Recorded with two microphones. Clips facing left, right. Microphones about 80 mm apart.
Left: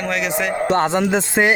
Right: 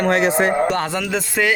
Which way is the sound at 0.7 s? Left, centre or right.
Left.